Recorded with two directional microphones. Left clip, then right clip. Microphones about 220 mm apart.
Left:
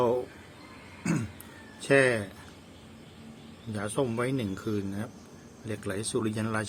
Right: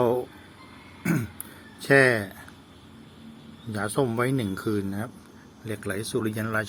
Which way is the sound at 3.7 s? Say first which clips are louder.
Right 4 dB; 25° right (ahead or behind).